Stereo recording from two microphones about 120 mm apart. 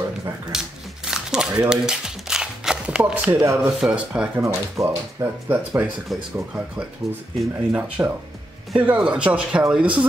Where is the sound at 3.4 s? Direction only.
20° right (ahead or behind).